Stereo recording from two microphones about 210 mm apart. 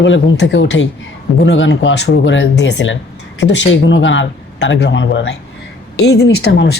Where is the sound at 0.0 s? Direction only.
60° left (ahead or behind).